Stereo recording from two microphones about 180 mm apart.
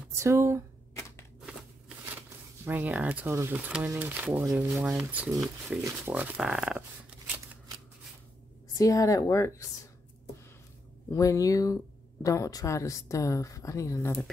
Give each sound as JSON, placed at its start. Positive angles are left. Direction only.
{"t": 0.2, "sound": "speech", "side_deg": -15}
{"t": 2.6, "sound": "speech", "side_deg": -10}
{"t": 8.7, "sound": "speech", "side_deg": 20}
{"t": 11.1, "sound": "speech", "side_deg": 20}